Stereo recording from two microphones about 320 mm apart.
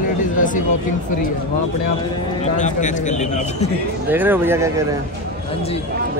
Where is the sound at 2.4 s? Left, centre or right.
Left.